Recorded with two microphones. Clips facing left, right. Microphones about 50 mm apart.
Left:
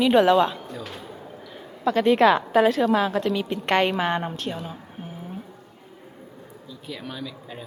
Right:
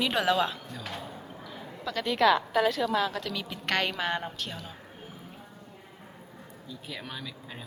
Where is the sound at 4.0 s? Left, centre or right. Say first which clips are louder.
Left 6 dB; centre.